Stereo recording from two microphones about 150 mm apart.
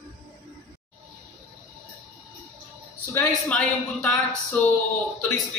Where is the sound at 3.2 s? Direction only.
5° left (ahead or behind).